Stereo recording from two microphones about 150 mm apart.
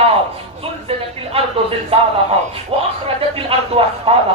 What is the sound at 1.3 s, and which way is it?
A woman's voice, 40° right (ahead or behind).